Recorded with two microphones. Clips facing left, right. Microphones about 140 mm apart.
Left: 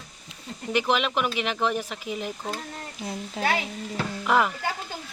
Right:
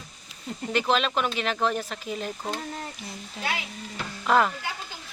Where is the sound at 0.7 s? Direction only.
15° left (ahead or behind).